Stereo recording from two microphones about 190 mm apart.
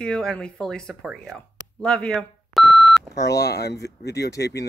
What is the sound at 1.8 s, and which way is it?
Beep, 5° left (ahead or behind).